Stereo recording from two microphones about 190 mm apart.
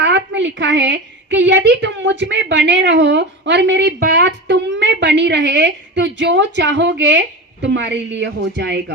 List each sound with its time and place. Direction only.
0.0 s a woman's voice: 70° right (ahead or behind)